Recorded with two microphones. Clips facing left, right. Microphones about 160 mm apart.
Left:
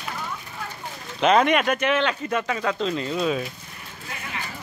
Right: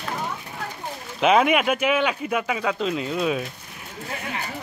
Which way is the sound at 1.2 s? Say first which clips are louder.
Even; 5° right (ahead or behind).